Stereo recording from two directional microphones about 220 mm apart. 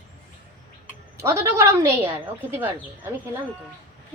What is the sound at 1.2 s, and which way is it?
Speech, 10° right (ahead or behind).